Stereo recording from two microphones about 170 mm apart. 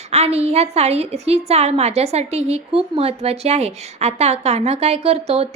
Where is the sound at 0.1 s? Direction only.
40° right (ahead or behind).